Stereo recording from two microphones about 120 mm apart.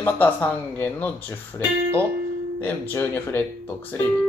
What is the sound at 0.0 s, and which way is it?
Speech, 15° left (ahead or behind).